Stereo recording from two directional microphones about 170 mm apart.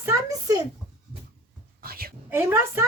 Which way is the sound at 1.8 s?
65° right (ahead or behind).